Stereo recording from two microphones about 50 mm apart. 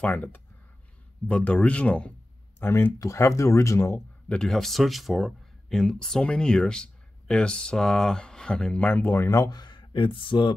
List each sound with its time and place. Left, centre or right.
0.0 s speech: left
2.6 s speech: left
3.0 s speech: left
4.4 s speech: centre
5.8 s speech: centre
8.7 s speech: left
9.1 s speech: left